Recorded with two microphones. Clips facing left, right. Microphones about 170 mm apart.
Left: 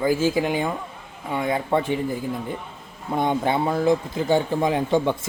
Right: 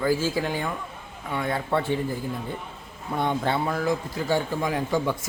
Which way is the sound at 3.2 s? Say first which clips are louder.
Left 3 dB; 15° left (ahead or behind).